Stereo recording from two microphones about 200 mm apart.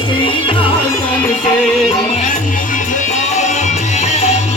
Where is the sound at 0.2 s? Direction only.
25° left (ahead or behind).